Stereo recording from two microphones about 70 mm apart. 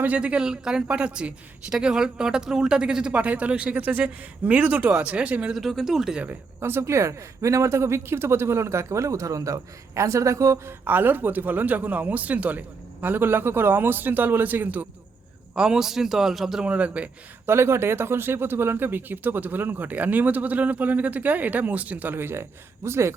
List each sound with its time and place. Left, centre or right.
0.0 s speech: centre
5.5 s speech: centre
6.6 s speech: right
10.7 s speech: right
15.5 s speech: centre
16.6 s speech: centre
17.4 s speech: right